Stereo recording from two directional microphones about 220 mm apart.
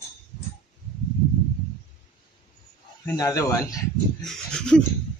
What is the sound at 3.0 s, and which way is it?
Speech, 15° left (ahead or behind).